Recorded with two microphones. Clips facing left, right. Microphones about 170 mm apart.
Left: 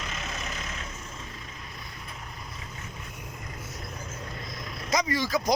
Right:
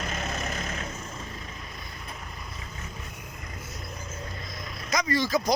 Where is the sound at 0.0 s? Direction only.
50° right (ahead or behind).